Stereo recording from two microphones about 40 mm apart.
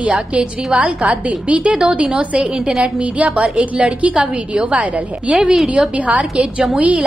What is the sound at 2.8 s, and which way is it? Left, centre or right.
Speech, right.